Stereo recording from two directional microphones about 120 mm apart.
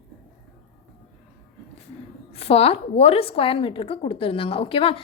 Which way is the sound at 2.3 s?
55° left (ahead or behind).